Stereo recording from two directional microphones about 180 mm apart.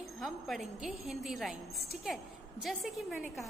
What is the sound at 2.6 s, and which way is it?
Speech, centre (ahead or behind).